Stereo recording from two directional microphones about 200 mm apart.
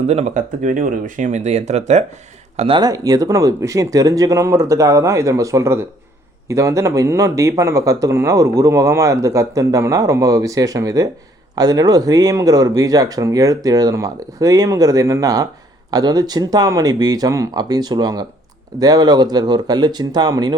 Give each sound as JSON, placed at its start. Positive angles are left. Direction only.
{"t": 0.1, "sound": "speech", "side_deg": -35}